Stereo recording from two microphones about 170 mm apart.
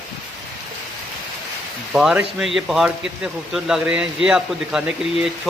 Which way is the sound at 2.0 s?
5° right (ahead or behind).